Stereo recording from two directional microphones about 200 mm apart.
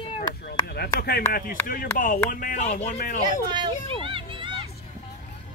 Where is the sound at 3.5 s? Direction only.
25° right (ahead or behind).